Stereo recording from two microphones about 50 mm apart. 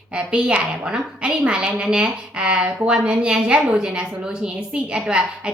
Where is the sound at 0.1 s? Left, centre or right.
Right.